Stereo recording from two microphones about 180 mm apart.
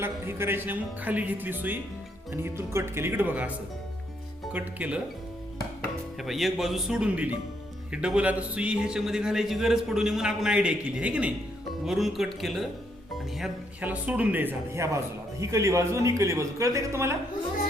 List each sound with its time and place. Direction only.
0.0 s a man's voice: 10° right (ahead or behind)
4.5 s a man's voice: 10° right (ahead or behind)
6.2 s a man's voice: centre (ahead or behind)